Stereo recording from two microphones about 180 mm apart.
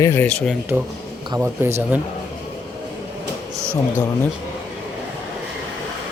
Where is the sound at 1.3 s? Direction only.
15° right (ahead or behind).